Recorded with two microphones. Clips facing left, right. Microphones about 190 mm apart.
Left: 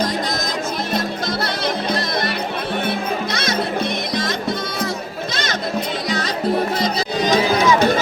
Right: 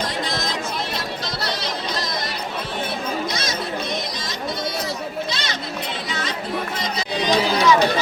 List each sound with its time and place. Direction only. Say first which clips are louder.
1.6 s music: left 6 dB; 60° left (ahead or behind)
3.3 s music: left 4 dB; 60° left (ahead or behind)
5.3 s music: left 5 dB; 45° left (ahead or behind)